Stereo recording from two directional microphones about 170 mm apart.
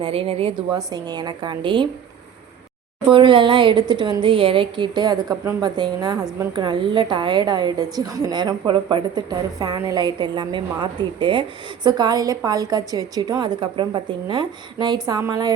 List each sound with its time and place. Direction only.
0.0 s a woman's voice: 35° right (ahead or behind)
3.1 s a woman's voice: 30° right (ahead or behind)